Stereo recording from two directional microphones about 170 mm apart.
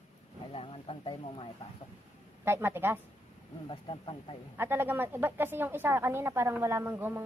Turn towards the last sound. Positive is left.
turn(degrees=-15)  # may be behind; listen again after turning